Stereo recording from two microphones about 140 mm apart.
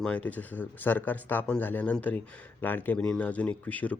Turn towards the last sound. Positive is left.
turn(degrees=10)  # may be behind; listen again after turning